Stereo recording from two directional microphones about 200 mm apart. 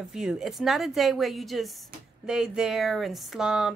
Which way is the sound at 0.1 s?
Centre (ahead or behind).